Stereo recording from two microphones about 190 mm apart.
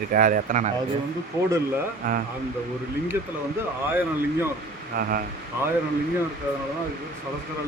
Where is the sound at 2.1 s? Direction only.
45° right (ahead or behind).